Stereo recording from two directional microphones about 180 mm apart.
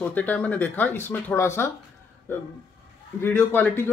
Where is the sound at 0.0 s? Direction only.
10° left (ahead or behind).